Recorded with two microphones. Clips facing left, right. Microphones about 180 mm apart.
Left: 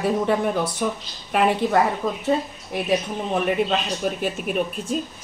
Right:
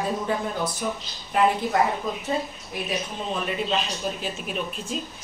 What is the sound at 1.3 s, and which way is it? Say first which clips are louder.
Speech: left 2 dB; 70° left (ahead or behind).